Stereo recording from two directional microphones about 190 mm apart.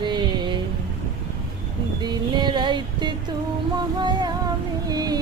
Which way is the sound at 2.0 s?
20° right (ahead or behind).